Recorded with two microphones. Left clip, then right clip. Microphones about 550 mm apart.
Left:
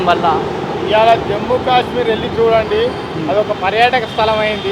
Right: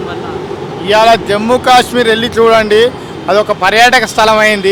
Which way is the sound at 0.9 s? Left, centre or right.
Right.